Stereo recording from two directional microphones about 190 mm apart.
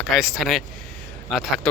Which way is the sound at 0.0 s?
Centre (ahead or behind).